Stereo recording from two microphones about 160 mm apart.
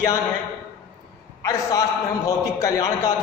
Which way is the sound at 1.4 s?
20° left (ahead or behind).